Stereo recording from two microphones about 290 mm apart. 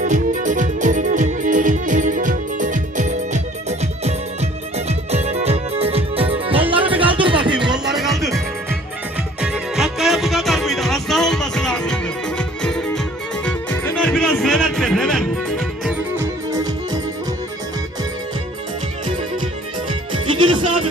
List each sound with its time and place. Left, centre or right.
0.0 s music: right
7.6 s music: centre
9.4 s music: centre
20.4 s music: right